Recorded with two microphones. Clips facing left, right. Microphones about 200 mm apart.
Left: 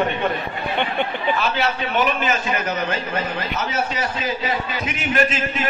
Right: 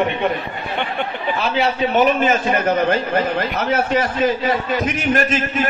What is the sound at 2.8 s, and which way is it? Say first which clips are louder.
A man's voice: right 6 dB; 60° right (ahead or behind).